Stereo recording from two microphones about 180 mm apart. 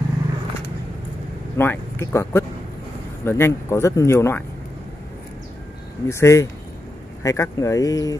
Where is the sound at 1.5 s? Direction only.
10° left (ahead or behind).